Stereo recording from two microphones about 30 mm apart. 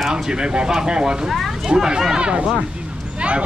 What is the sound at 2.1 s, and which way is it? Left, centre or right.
Speech, right.